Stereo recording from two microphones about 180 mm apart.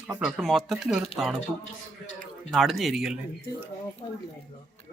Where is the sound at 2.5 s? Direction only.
Centre (ahead or behind).